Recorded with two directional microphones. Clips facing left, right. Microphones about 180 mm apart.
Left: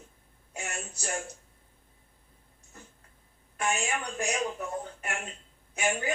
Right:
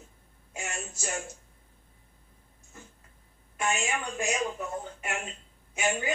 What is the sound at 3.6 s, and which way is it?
Speech, centre (ahead or behind).